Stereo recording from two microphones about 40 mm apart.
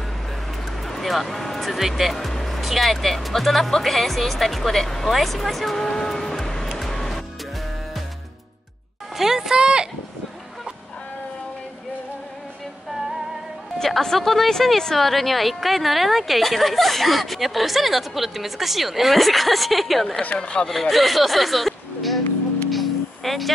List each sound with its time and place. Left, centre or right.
0.8 s speech: centre
2.1 s speech: centre
6.8 s music: centre
9.1 s speech: centre
9.6 s speech: right
13.7 s speech: centre
20.3 s speech: left
20.6 s speech: centre
22.7 s music: centre